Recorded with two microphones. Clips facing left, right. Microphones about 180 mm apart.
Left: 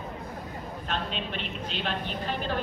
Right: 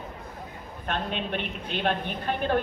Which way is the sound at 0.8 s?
55° right (ahead or behind).